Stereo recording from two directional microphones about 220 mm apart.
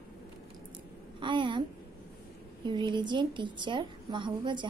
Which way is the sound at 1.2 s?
20° right (ahead or behind).